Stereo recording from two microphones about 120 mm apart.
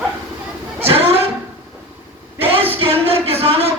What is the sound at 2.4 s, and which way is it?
Speech, 55° right (ahead or behind).